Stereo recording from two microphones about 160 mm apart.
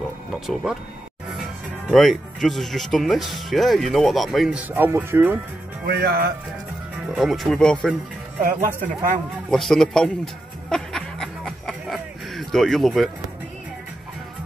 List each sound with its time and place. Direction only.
0.3 s speech: centre (ahead or behind)
1.9 s speech: centre (ahead or behind)
5.9 s speech: 75° right (ahead or behind)
7.2 s speech: centre (ahead or behind)
8.5 s speech: 55° right (ahead or behind)
9.5 s a sound: 5° left (ahead or behind)